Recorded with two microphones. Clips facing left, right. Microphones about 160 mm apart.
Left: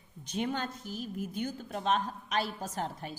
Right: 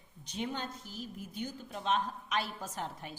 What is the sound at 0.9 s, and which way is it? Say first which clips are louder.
Speech: left 5 dB; 10° left (ahead or behind).